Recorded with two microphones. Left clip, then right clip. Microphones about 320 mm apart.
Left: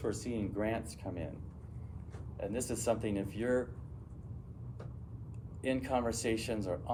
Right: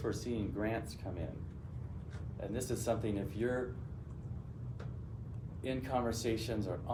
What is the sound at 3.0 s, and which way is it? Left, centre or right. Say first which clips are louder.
Speech: left 1 dB; left.